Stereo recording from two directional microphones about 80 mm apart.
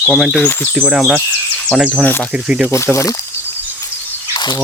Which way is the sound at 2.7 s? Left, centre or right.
Left.